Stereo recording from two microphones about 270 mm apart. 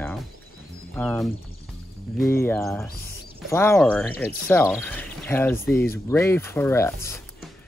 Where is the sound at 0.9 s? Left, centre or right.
Centre.